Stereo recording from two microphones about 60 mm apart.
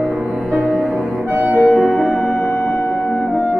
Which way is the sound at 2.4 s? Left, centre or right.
Left.